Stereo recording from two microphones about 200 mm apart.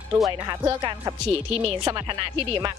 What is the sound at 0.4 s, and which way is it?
Speech, 20° right (ahead or behind).